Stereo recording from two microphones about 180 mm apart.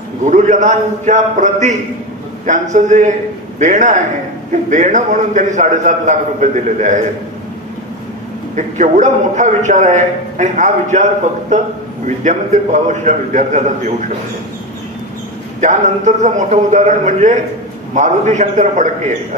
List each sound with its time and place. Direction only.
0.2 s a man's voice: 45° right (ahead or behind)
8.5 s a man's voice: 40° right (ahead or behind)
12.2 s a man's voice: 40° right (ahead or behind)
15.6 s a man's voice: 40° right (ahead or behind)